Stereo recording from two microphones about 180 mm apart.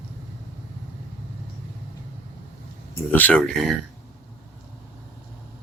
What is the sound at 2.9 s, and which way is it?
Speech, 10° left (ahead or behind).